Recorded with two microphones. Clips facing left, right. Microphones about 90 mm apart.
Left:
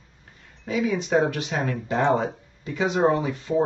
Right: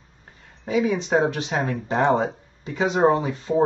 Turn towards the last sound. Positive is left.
turn(degrees=-30)  # may be behind; listen again after turning